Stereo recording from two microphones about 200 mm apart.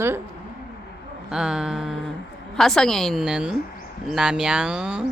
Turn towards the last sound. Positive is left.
turn(degrees=-5)  # may be behind; listen again after turning